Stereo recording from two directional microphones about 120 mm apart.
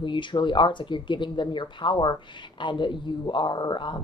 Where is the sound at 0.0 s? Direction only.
40° left (ahead or behind).